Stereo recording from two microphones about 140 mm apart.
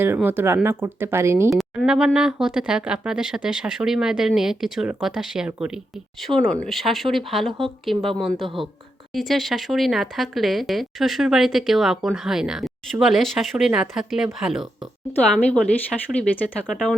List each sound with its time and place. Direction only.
0.0 s speech: 15° right (ahead or behind)
1.5 s speech: centre (ahead or behind)
15.4 s a woman's voice: 10° left (ahead or behind)